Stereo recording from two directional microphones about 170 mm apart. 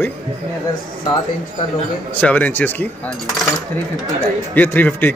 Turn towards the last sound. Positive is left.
turn(degrees=10)  # may be behind; listen again after turning